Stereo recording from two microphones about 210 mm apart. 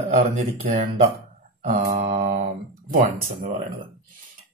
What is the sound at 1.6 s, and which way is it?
Speech, 35° right (ahead or behind).